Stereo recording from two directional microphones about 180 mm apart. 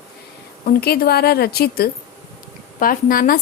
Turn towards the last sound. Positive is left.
turn(degrees=55)  # may be behind; listen again after turning